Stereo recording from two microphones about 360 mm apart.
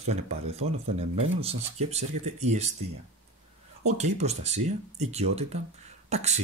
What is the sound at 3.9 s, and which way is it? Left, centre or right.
Speech, centre.